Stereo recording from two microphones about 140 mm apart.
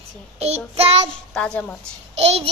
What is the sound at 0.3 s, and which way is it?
Child singing, 50° right (ahead or behind).